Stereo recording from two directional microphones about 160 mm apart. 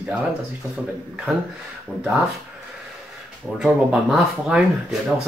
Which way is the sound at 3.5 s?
5° right (ahead or behind).